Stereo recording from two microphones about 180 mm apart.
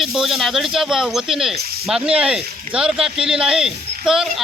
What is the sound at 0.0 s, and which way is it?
Speech, centre (ahead or behind).